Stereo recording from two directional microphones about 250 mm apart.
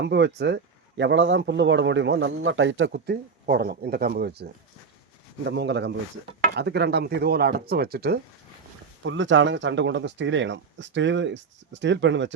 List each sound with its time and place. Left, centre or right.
0.0 s speech: right